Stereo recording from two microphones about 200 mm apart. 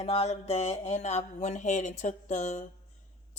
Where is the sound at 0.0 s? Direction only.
30° left (ahead or behind).